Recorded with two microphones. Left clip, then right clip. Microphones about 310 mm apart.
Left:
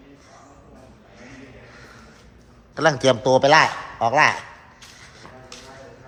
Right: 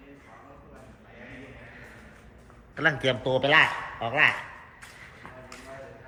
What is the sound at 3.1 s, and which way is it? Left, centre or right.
A man's voice, left.